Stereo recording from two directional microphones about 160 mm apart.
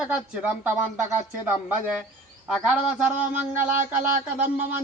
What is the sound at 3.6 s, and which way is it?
Speech, 50° right (ahead or behind).